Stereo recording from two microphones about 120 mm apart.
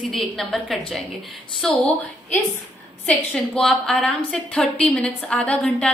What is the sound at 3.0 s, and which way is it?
A woman's voice, 5° left (ahead or behind).